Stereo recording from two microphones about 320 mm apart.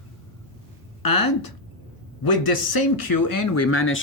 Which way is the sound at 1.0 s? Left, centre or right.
Left.